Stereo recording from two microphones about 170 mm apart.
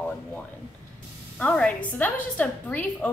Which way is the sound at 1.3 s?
5° left (ahead or behind).